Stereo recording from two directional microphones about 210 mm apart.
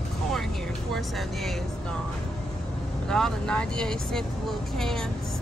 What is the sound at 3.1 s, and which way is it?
Speech, 5° left (ahead or behind).